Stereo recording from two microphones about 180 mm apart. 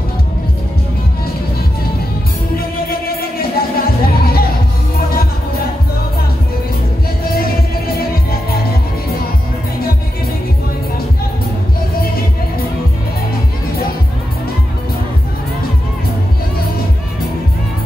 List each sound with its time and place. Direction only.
2.9 s music: 55° left (ahead or behind)
7.2 s music: 55° left (ahead or behind)